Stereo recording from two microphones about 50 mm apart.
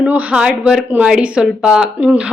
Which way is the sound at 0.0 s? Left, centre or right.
Right.